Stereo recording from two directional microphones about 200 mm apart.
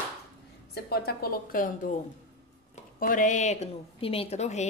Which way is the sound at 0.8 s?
50° left (ahead or behind).